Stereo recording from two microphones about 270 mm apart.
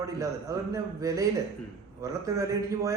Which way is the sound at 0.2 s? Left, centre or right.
Centre.